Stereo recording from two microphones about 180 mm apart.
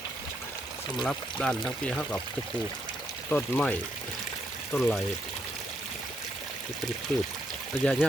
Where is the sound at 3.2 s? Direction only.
5° left (ahead or behind).